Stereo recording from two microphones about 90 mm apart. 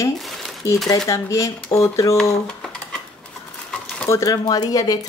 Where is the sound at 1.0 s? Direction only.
35° left (ahead or behind).